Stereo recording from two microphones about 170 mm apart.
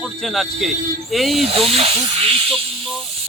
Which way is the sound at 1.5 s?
35° right (ahead or behind).